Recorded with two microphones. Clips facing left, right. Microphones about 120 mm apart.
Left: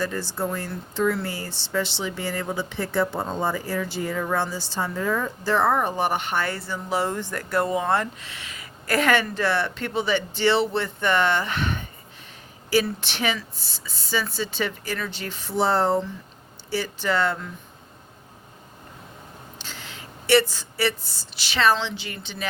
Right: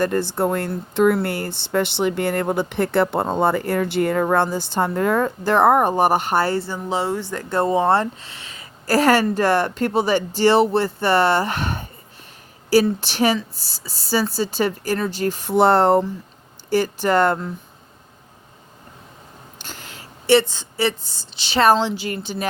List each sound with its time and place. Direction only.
0.0 s speech: 55° right (ahead or behind); by 7.4 s 15° right (ahead or behind)
7.5 s speech: 25° right (ahead or behind)
13.0 s speech: 40° right (ahead or behind); by 16.0 s 65° right (ahead or behind)
16.6 s speech: 45° right (ahead or behind)
19.6 s a sound: 45° right (ahead or behind)
20.2 s speech: 25° right (ahead or behind)
21.0 s a woman's voice: 5° left (ahead or behind)
21.3 s a woman's voice: 30° right (ahead or behind)
21.6 s speech: 40° right (ahead or behind)